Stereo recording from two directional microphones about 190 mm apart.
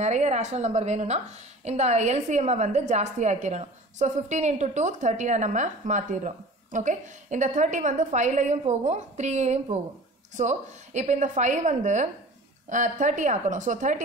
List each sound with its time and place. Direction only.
0.0 s a woman's voice: 35° right (ahead or behind)